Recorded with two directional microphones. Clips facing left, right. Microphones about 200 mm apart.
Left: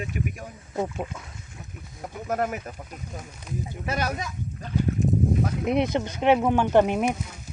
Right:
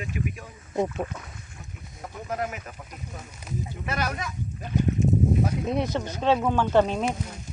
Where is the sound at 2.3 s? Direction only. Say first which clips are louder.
Left 4 dB; 50° left (ahead or behind).